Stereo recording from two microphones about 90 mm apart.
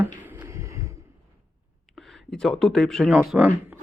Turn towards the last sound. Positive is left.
turn(degrees=-15)  # may be behind; listen again after turning